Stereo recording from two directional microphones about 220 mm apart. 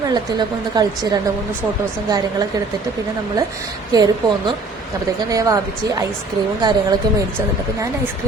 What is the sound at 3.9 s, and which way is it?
A woman's voice, 15° right (ahead or behind).